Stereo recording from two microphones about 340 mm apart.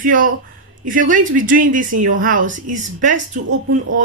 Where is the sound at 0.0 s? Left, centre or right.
Right.